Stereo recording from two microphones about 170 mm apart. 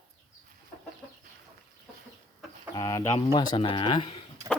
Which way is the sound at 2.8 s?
20° left (ahead or behind).